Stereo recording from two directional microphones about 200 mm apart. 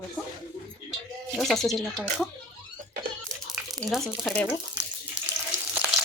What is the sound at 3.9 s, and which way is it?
Speech, centre (ahead or behind).